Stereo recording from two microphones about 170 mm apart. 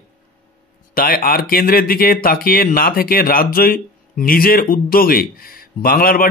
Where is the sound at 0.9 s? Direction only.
60° left (ahead or behind).